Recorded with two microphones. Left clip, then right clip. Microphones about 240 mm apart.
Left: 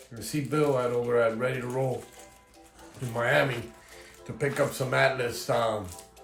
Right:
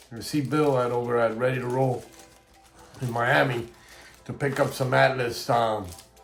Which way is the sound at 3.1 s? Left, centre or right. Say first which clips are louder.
Right 3 dB; centre.